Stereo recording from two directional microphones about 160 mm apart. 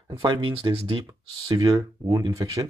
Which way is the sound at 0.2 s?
35° right (ahead or behind).